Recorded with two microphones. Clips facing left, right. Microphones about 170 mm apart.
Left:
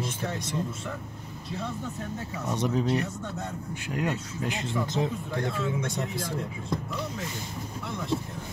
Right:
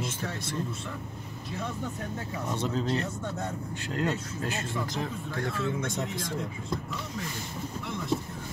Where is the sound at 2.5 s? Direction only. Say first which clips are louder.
Left 3 dB; 15° left (ahead or behind).